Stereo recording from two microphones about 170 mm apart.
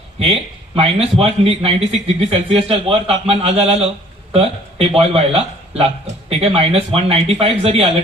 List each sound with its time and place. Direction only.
0.8 s a man's voice: 35° right (ahead or behind)